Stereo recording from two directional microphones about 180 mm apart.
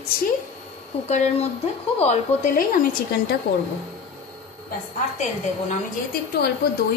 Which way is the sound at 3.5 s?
60° left (ahead or behind).